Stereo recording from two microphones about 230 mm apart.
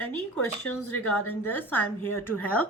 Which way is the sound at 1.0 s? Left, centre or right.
Left.